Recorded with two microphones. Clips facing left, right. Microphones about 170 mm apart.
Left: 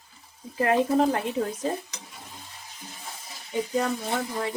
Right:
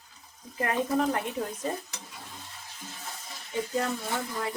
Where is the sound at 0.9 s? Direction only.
35° left (ahead or behind).